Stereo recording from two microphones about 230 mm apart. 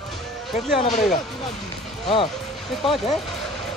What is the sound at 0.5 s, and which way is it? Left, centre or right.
Speech, centre.